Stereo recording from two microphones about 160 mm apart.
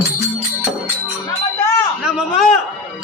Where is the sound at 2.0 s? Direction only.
Centre (ahead or behind).